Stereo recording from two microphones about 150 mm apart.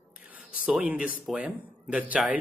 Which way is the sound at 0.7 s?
10° right (ahead or behind).